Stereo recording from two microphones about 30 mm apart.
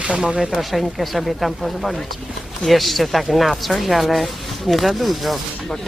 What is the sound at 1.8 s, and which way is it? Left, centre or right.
Speech, centre.